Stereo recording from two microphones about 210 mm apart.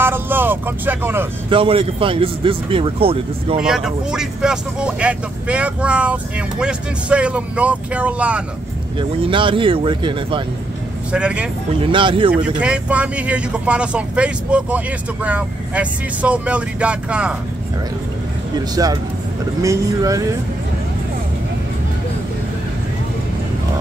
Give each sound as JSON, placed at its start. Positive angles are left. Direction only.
{"t": 0.0, "sound": "vehicle", "side_deg": -10}
{"t": 1.5, "sound": "speech", "side_deg": -25}
{"t": 3.6, "sound": "speech", "side_deg": 0}
{"t": 9.3, "sound": "speech", "side_deg": -25}
{"t": 11.1, "sound": "speech", "side_deg": -5}
{"t": 11.8, "sound": "speech", "side_deg": -25}
{"t": 12.3, "sound": "speech", "side_deg": -5}
{"t": 18.8, "sound": "speech", "side_deg": -20}